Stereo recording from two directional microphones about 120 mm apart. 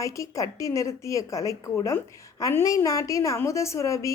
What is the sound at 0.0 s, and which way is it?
A woman's voice, 25° left (ahead or behind).